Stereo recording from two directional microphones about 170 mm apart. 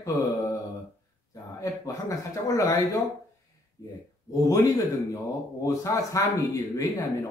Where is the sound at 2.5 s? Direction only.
20° left (ahead or behind).